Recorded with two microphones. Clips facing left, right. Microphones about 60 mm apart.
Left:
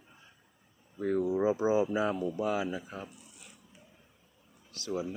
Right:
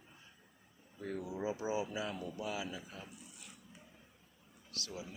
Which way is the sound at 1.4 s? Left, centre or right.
Left.